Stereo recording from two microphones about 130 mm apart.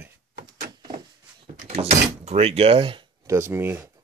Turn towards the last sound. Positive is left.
turn(degrees=-15)  # may be behind; listen again after turning